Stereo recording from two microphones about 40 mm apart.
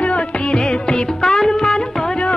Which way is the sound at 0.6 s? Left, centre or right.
Left.